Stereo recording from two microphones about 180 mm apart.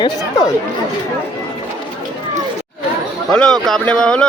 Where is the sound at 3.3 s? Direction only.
5° left (ahead or behind).